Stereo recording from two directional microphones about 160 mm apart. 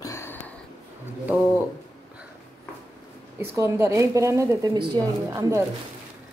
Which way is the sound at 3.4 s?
20° right (ahead or behind).